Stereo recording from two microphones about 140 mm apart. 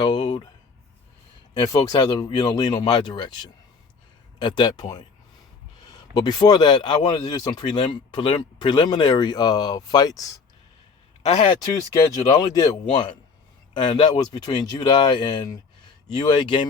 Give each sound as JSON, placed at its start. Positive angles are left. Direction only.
{"t": 0.0, "sound": "a sound", "side_deg": 30}
{"t": 1.5, "sound": "speech", "side_deg": 25}
{"t": 11.2, "sound": "speech", "side_deg": 55}
{"t": 11.4, "sound": "speech", "side_deg": 25}